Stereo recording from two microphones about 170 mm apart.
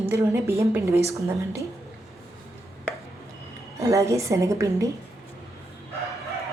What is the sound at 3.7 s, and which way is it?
A woman's voice, 20° right (ahead or behind).